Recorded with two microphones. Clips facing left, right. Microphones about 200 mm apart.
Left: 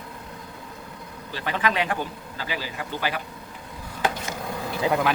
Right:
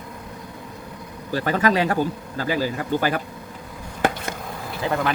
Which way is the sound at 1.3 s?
45° right (ahead or behind).